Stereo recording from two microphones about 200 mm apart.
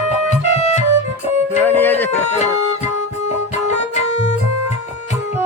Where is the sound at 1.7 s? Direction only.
10° left (ahead or behind).